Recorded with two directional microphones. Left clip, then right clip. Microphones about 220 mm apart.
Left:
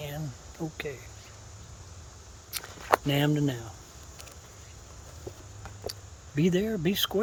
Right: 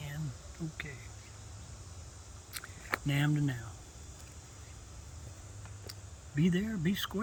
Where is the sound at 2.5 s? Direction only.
35° left (ahead or behind).